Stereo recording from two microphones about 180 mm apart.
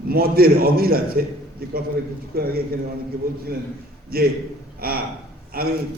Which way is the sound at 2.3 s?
55° right (ahead or behind).